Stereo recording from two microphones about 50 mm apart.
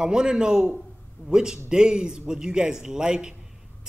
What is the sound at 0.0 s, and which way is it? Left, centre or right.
Speech, centre.